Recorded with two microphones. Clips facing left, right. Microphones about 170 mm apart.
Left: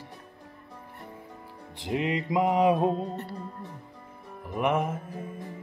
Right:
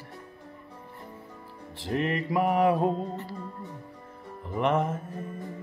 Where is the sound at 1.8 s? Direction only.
15° left (ahead or behind).